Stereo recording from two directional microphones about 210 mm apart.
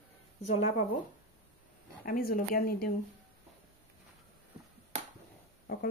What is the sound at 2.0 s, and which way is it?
Speech, 45° left (ahead or behind).